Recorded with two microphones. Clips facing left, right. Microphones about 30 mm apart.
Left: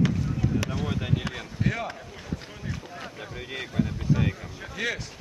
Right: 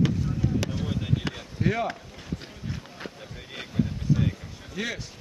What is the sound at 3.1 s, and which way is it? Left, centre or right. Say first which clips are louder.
Boat: left 4 dB; left.